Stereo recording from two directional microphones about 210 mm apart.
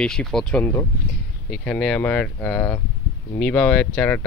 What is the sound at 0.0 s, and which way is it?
Speech, 5° left (ahead or behind).